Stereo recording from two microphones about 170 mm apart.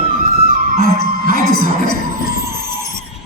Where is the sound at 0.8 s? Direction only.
60° right (ahead or behind).